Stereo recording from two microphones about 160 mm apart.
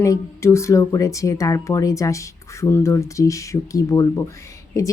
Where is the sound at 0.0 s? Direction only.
20° left (ahead or behind).